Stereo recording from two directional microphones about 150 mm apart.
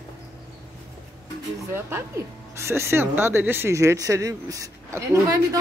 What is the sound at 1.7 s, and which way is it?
Speech, 15° right (ahead or behind).